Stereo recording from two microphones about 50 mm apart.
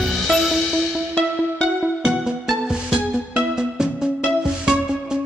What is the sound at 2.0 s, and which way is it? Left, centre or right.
Music, centre.